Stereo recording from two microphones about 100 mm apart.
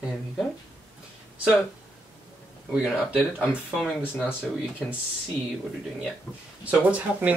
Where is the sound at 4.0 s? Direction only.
20° left (ahead or behind).